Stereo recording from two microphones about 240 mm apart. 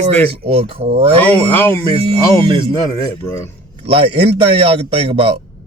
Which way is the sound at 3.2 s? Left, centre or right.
Centre.